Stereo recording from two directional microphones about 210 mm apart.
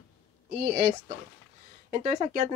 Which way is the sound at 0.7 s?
30° right (ahead or behind).